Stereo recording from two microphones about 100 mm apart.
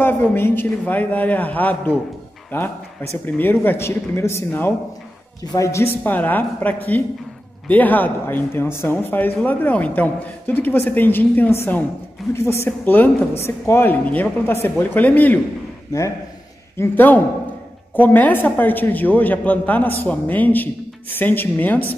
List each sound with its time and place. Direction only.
0.0 s a man's voice: 20° left (ahead or behind)
5.4 s a man's voice: 35° left (ahead or behind); by 15.4 s 15° left (ahead or behind)
16.7 s a man's voice: 20° left (ahead or behind)